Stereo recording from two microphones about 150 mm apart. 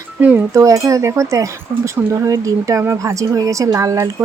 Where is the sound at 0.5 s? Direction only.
20° right (ahead or behind).